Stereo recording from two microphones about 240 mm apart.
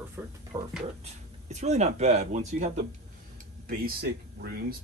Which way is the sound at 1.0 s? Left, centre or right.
Right.